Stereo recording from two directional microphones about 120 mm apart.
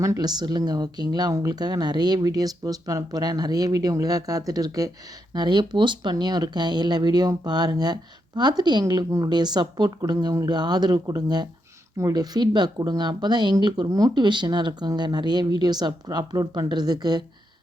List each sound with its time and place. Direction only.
0.0 s speech: 30° right (ahead or behind)